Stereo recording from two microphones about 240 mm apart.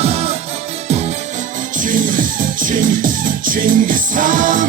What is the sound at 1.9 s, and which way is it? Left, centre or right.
Music, right.